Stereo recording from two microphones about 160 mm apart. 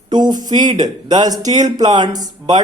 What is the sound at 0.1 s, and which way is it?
Speech, 25° right (ahead or behind).